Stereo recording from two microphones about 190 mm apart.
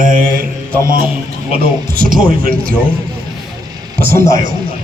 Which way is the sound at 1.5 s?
50° right (ahead or behind).